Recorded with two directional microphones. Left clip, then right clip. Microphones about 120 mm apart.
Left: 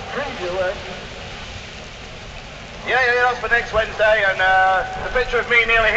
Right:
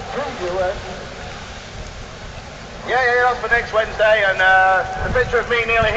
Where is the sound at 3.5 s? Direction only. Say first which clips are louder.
Right 1 dB; centre (ahead or behind).